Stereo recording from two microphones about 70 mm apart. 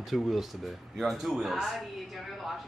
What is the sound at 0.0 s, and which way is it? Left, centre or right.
Speech, centre.